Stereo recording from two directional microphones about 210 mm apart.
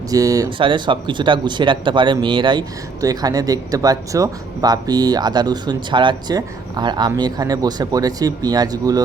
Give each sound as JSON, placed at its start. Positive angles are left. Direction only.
{"t": 0.1, "sound": "speech", "side_deg": -15}